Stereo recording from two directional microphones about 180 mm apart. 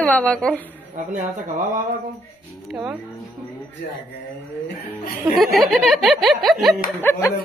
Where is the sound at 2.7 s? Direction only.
5° right (ahead or behind).